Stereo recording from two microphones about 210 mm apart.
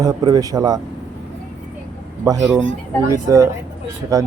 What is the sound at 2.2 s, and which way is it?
Speech, 15° right (ahead or behind).